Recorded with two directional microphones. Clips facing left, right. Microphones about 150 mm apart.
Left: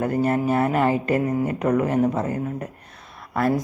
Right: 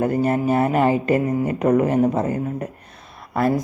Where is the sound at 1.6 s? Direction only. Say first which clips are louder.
Right 4 dB; 20° right (ahead or behind).